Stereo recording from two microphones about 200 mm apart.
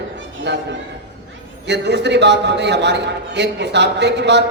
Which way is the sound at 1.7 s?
60° right (ahead or behind).